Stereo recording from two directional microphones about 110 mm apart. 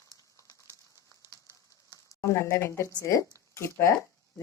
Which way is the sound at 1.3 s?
30° left (ahead or behind).